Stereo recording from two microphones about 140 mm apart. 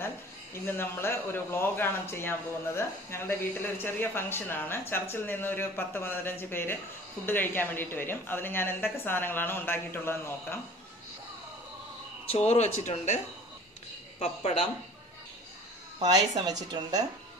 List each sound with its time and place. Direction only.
0.7 s a man's voice: 15° left (ahead or behind)
12.3 s speech: 50° left (ahead or behind)
14.2 s speech: 50° left (ahead or behind)
16.4 s a woman's voice: 30° right (ahead or behind)